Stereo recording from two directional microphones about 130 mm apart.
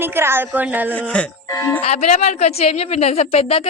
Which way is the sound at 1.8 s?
60° left (ahead or behind).